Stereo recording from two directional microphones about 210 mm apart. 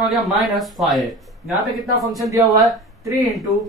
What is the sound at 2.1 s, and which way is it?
Speech, 15° right (ahead or behind).